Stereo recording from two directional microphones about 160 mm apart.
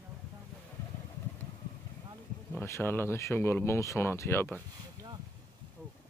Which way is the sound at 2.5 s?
15° left (ahead or behind).